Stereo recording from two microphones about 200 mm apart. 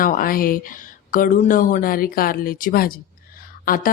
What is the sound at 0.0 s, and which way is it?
A woman's voice, 45° left (ahead or behind).